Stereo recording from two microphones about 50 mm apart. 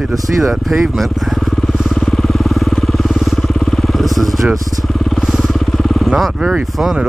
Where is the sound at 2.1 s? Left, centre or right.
Centre.